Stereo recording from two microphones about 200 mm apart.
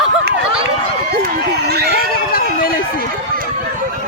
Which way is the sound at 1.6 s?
55° right (ahead or behind).